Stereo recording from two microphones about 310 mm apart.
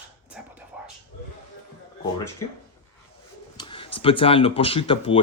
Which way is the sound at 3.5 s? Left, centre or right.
Centre.